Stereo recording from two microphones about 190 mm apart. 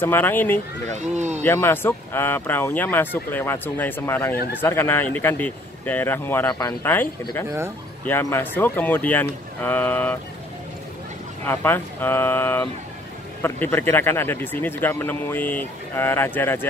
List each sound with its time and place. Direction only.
0.0 s speech: 10° left (ahead or behind)
0.9 s speech: 35° right (ahead or behind)
1.4 s speech: 10° left (ahead or behind)
11.4 s speech: 10° left (ahead or behind)